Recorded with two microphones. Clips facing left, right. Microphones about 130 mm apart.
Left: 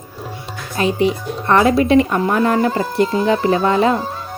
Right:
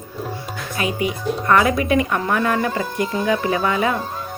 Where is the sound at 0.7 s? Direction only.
30° left (ahead or behind).